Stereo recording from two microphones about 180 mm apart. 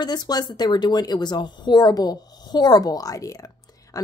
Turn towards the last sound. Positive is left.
turn(degrees=20)  # may be behind; listen again after turning